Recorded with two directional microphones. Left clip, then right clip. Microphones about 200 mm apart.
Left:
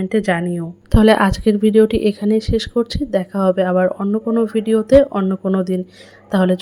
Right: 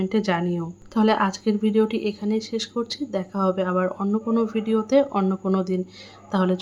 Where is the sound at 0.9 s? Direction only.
30° left (ahead or behind).